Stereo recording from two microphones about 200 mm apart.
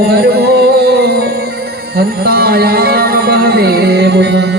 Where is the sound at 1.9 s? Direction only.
50° right (ahead or behind).